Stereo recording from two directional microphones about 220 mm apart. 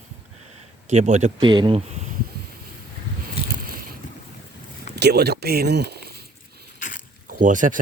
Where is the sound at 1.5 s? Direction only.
20° right (ahead or behind).